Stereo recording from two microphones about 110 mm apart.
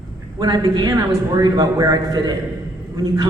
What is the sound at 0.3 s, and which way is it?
A man's voice, 35° right (ahead or behind).